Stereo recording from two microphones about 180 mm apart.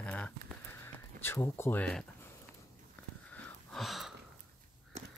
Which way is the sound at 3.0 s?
10° left (ahead or behind).